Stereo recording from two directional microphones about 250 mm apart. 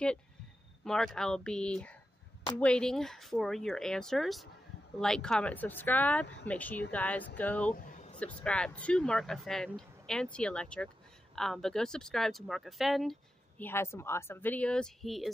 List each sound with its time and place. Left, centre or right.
0.8 s speech: centre
7.7 s a sound: left
8.2 s speech: centre